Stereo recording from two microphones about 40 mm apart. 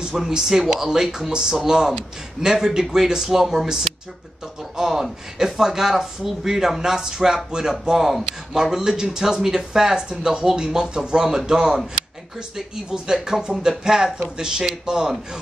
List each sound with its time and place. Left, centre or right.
0.3 s speech: centre
4.7 s a sound: centre
5.4 s speech: centre